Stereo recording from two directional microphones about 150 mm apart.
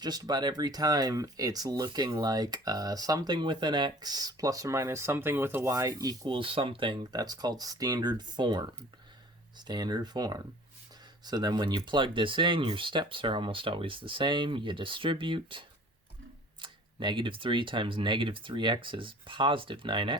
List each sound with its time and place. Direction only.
0.0 s speech: 25° right (ahead or behind)